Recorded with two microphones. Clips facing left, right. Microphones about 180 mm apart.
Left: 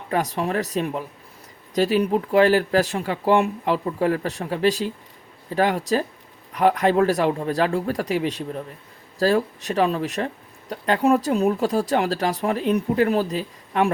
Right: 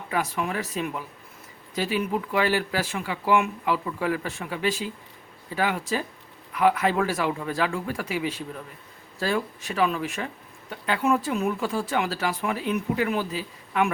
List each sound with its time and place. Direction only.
0.1 s speech: 40° left (ahead or behind)